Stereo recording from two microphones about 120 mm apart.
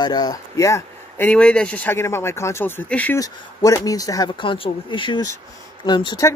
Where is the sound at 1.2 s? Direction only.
10° left (ahead or behind).